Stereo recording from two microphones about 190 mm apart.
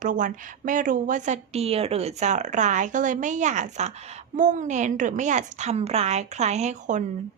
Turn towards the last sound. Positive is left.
turn(degrees=-40)  # may be behind; listen again after turning